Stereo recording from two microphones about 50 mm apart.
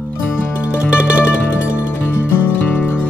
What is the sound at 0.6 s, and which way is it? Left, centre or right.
Music, right.